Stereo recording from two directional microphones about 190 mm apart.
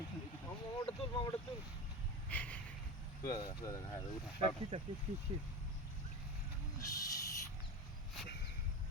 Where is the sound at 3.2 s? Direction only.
20° left (ahead or behind).